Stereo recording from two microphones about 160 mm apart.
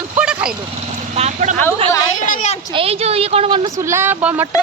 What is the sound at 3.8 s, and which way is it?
Speech, 15° right (ahead or behind).